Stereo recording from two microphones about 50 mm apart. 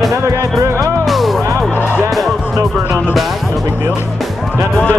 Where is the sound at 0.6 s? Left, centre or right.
Right.